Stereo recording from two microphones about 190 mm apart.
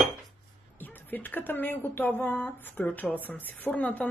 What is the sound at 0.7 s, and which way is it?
Speech, 10° left (ahead or behind).